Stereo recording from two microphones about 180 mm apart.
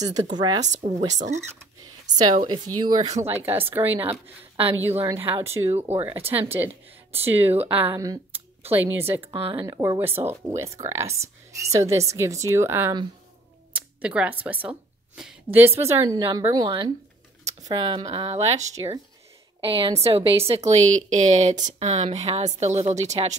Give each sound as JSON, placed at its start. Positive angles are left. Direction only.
{"t": 0.0, "sound": "speech", "side_deg": -20}
{"t": 0.7, "sound": "a woman's voice", "side_deg": -40}
{"t": 2.1, "sound": "speech", "side_deg": -25}
{"t": 3.2, "sound": "speech", "side_deg": -15}
{"t": 9.2, "sound": "speech", "side_deg": -30}
{"t": 13.7, "sound": "music", "side_deg": -5}
{"t": 14.4, "sound": "a woman's voice", "side_deg": -10}